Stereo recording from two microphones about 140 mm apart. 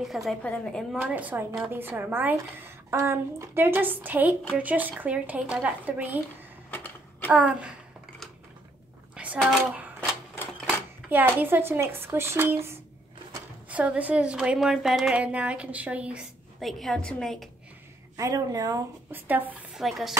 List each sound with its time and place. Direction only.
0.0 s a woman's voice: centre (ahead or behind)
0.9 s a woman's voice: 10° right (ahead or behind)
6.7 s a sound: 10° left (ahead or behind)
7.3 s a woman's voice: 10° right (ahead or behind)
9.1 s a sound: 10° right (ahead or behind)
9.4 s a woman's voice: centre (ahead or behind)
9.9 s typewriter: 15° left (ahead or behind)
11.1 s a woman's voice: 15° right (ahead or behind); by 17.5 s 5° left (ahead or behind)
18.1 s a woman's voice: 25° right (ahead or behind)
19.1 s a woman's voice: 15° right (ahead or behind)
19.8 s a woman's voice: centre (ahead or behind)